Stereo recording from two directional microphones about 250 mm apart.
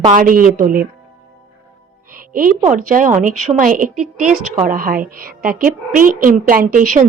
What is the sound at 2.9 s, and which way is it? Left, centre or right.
A woman's voice, right.